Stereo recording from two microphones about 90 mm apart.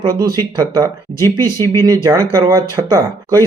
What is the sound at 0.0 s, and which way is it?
Speech, 45° right (ahead or behind).